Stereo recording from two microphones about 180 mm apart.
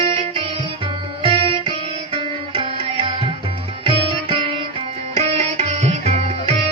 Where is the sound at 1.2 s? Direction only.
30° right (ahead or behind).